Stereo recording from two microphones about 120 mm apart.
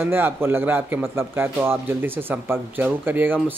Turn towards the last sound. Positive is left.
turn(degrees=-15)  # may be behind; listen again after turning